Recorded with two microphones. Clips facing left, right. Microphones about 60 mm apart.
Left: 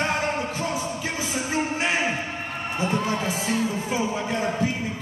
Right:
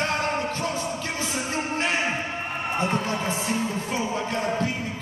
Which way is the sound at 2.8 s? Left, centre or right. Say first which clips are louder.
Left 2 dB; right.